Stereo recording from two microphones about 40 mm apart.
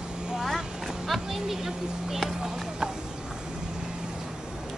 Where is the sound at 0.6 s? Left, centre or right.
Centre.